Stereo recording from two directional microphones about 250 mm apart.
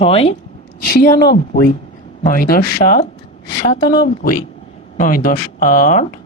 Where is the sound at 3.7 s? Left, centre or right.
Centre.